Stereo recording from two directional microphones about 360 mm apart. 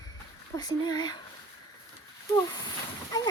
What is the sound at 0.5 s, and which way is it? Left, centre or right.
Speech, centre.